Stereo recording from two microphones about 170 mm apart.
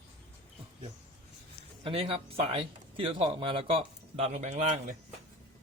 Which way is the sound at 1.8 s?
35° right (ahead or behind).